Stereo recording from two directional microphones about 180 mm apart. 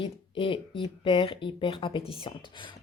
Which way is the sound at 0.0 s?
30° left (ahead or behind).